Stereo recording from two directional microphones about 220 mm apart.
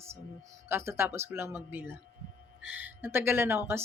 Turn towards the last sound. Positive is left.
turn(degrees=-10)  # may be behind; listen again after turning